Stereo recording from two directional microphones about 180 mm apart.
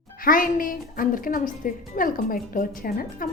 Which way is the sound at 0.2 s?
50° left (ahead or behind).